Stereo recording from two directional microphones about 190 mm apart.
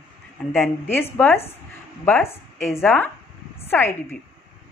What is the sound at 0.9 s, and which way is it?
A woman's voice, 10° left (ahead or behind).